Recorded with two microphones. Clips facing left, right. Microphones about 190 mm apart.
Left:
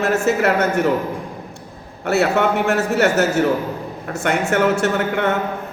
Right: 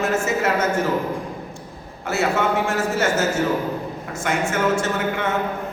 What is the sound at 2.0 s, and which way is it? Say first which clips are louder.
A man's voice: left 4 dB; 65° left (ahead or behind).